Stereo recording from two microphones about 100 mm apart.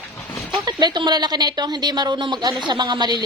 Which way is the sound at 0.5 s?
45° right (ahead or behind).